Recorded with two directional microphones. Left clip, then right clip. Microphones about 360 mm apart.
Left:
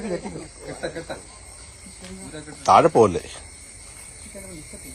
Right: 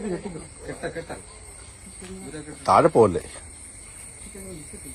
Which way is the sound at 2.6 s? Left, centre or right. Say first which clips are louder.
Left 2 dB; centre.